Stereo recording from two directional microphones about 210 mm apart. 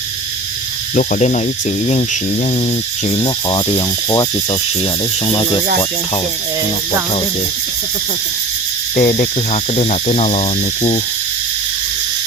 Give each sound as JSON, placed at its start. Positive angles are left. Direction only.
{"t": 0.9, "sound": "speech", "side_deg": 35}
{"t": 3.1, "sound": "speech", "side_deg": 25}
{"t": 9.0, "sound": "speech", "side_deg": 35}